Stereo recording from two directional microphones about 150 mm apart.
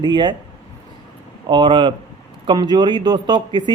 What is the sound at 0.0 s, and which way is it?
Speech, 30° right (ahead or behind).